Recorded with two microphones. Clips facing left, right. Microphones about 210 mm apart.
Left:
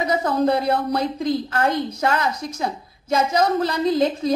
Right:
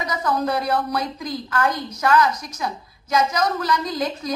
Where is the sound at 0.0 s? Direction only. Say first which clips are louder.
Left 4 dB; 25° left (ahead or behind).